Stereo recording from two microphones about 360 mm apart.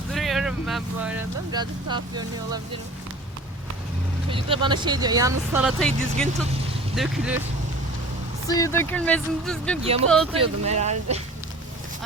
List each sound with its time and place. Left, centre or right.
0.1 s speech: centre
4.3 s speech: centre
8.4 s speech: centre
10.3 s speech: centre